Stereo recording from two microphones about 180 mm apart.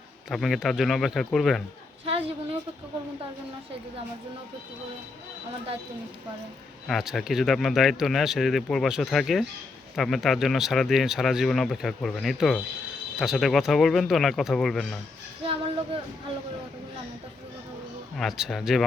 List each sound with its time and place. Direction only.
0.3 s speech: centre (ahead or behind)
2.0 s a woman's voice: 30° right (ahead or behind)
6.8 s speech: centre (ahead or behind)
18.2 s speech: centre (ahead or behind)